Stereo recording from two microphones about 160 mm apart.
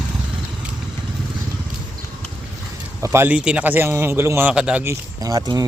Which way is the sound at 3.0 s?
15° right (ahead or behind).